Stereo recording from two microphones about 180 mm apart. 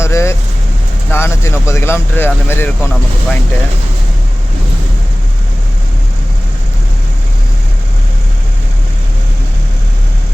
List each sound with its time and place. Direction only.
0.0 s vehicle: 15° left (ahead or behind)
1.1 s speech: 15° left (ahead or behind)